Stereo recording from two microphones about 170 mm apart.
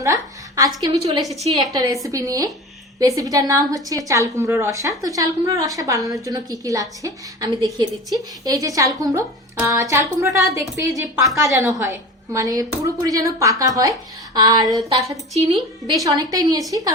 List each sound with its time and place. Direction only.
0.0 s a sound: 20° right (ahead or behind)
1.2 s a woman's voice: centre (ahead or behind)
1.5 s a woman's voice: 20° right (ahead or behind)